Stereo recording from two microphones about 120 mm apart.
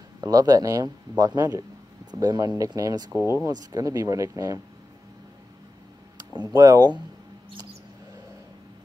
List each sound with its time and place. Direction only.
0.2 s speech: 30° right (ahead or behind)
3.1 s speech: 15° right (ahead or behind)
3.7 s speech: 30° right (ahead or behind)
6.5 s speech: 35° right (ahead or behind)